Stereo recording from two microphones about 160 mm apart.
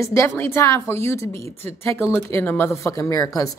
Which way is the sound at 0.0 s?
20° left (ahead or behind).